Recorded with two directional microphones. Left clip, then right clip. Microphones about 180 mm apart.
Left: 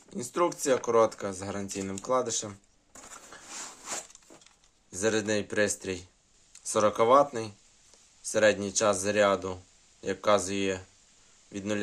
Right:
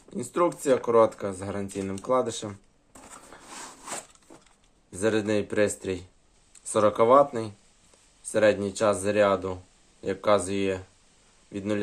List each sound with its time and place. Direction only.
0.1 s speech: 5° left (ahead or behind)
2.9 s a sound: 10° left (ahead or behind)
4.9 s speech: centre (ahead or behind)